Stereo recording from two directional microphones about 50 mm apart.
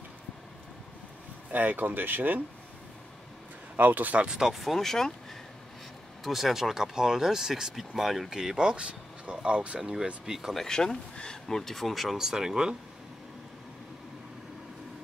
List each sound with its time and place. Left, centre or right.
1.5 s speech: right
3.7 s speech: right
4.3 s speech: centre
4.6 s speech: centre
6.2 s speech: centre; by 9.8 s right
9.8 s speech: centre
10.5 s speech: centre
12.2 s speech: centre